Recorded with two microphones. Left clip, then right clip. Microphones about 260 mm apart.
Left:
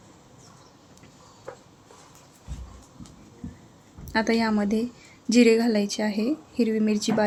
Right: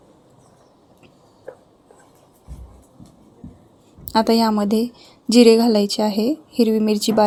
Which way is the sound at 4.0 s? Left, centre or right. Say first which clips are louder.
Right 7 dB; centre.